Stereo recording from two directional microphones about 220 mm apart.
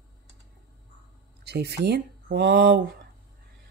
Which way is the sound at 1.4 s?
50° right (ahead or behind).